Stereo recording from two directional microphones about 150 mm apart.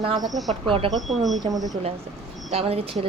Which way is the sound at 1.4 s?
25° right (ahead or behind).